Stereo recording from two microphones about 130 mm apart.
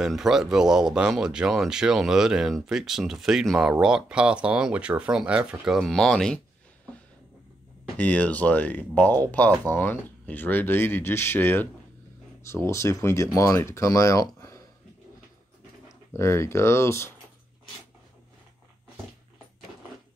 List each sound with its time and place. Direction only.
0.0 s speech: 5° right (ahead or behind)
8.0 s speech: 10° left (ahead or behind)
16.1 s speech: 20° left (ahead or behind)